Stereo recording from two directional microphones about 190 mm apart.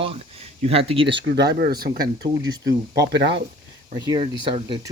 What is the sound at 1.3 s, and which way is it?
Speech, 55° right (ahead or behind).